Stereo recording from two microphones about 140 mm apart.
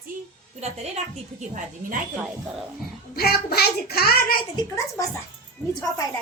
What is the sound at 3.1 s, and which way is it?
A child's voice, 90° left.